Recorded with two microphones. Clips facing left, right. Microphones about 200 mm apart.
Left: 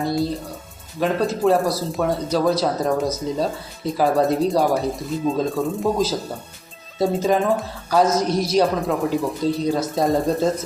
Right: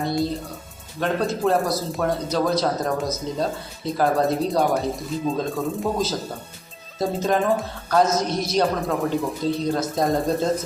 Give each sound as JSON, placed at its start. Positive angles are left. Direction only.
{"t": 0.0, "sound": "speech", "side_deg": 0}
{"t": 7.0, "sound": "speech", "side_deg": 0}
{"t": 8.3, "sound": "a man's voice", "side_deg": 30}
{"t": 8.5, "sound": "speech", "side_deg": 0}